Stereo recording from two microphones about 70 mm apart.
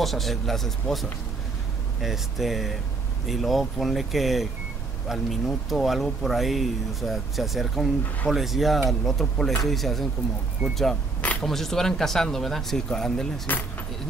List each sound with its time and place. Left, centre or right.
0.0 s speech: centre
13.5 s speech: left